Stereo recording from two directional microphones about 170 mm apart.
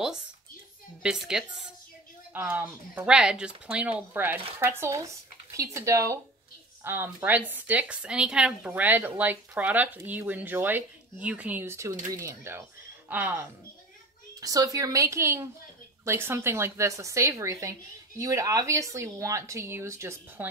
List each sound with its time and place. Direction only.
1.0 s a woman's voice: 5° right (ahead or behind)